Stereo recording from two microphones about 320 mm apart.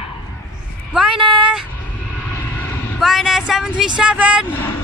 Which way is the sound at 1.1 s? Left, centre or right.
Centre.